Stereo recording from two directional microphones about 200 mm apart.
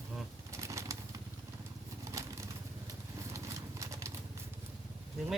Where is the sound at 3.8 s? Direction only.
15° right (ahead or behind).